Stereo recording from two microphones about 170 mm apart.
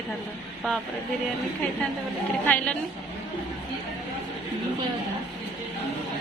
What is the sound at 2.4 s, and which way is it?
Speech, 10° left (ahead or behind).